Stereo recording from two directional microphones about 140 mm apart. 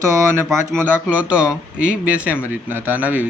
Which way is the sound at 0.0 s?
20° right (ahead or behind).